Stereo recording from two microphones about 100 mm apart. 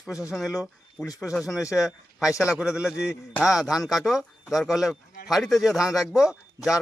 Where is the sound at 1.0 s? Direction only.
35° left (ahead or behind).